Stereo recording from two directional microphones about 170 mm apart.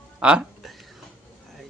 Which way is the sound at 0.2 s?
5° right (ahead or behind).